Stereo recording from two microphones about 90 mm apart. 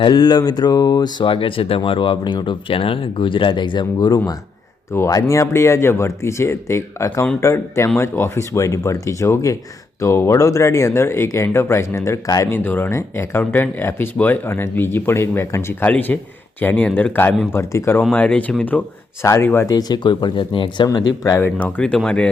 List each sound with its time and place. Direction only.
0.0 s speech: 55° left (ahead or behind)
1.3 s speech: 75° left (ahead or behind); by 12.5 s 40° left (ahead or behind)
12.5 s speech: 25° left (ahead or behind)
18.1 s speech: 15° left (ahead or behind)
19.2 s speech: 35° left (ahead or behind)
19.6 s speech: 50° left (ahead or behind); by 20.8 s 70° left (ahead or behind)
20.8 s speech: 45° left (ahead or behind)
21.3 s speech: 25° left (ahead or behind)
21.8 s speech: 10° left (ahead or behind)